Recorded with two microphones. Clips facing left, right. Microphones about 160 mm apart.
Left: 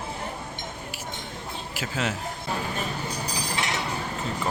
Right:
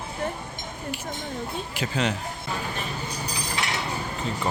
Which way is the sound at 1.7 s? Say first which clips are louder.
Right 2 dB; 5° left (ahead or behind).